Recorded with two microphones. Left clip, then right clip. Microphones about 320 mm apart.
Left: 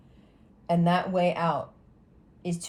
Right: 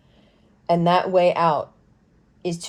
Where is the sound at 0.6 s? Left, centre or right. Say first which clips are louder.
Right 7 dB; right.